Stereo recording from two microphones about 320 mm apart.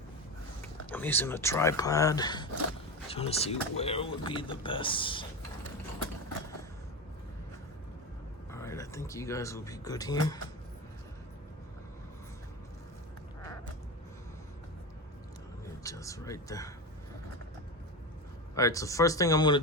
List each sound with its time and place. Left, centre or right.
0.9 s speech: centre
8.4 s speech: centre
15.8 s a sound: centre
18.5 s speech: centre